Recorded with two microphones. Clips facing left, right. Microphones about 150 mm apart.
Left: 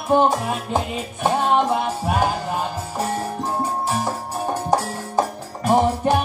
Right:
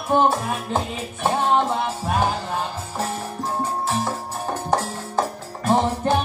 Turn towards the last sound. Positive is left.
turn(degrees=15)  # may be behind; listen again after turning